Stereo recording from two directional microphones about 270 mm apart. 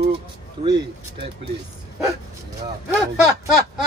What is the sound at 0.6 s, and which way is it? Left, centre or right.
Speech, centre.